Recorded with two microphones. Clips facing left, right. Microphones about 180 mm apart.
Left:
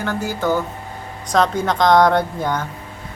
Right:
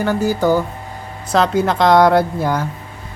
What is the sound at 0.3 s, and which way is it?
Speech, 15° right (ahead or behind).